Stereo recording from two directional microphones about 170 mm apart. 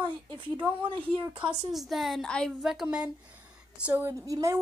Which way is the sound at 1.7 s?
Centre (ahead or behind).